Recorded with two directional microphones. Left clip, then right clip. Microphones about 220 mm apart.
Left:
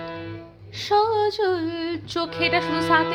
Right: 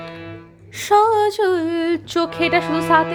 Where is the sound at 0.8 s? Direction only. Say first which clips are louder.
Right 6 dB; 30° right (ahead or behind).